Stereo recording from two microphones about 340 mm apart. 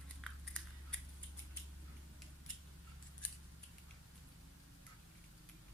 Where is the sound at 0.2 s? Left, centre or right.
Centre.